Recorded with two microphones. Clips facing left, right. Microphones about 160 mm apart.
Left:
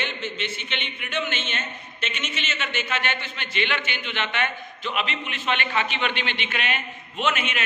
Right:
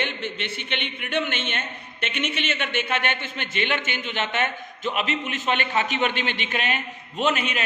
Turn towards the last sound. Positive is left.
turn(degrees=-35)  # may be behind; listen again after turning